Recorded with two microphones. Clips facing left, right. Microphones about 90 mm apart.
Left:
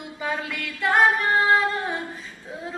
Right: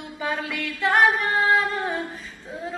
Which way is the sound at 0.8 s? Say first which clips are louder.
Even; 15° left (ahead or behind).